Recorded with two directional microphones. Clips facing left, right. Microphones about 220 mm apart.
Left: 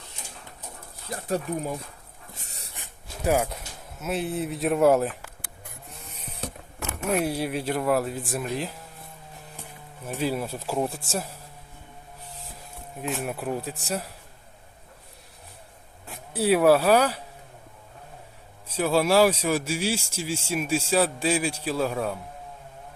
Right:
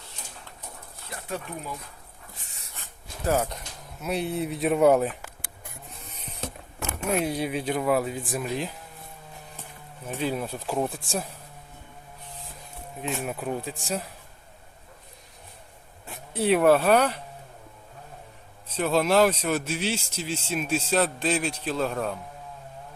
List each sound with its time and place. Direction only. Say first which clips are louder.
1.1 s speech: left 7 dB; 40° left (ahead or behind)
2.4 s dog: left 4 dB; 35° left (ahead or behind)
2.7 s speech: left 1 dB; 15° left (ahead or behind)
7.2 s speech: left 1 dB; 5° left (ahead or behind)
10.0 s speech: left 1 dB; 10° left (ahead or behind)
13.0 s speech: left 1 dB; centre (ahead or behind)
16.0 s speech: left 1 dB; 5° left (ahead or behind)
18.7 s speech: left 1 dB; 10° left (ahead or behind)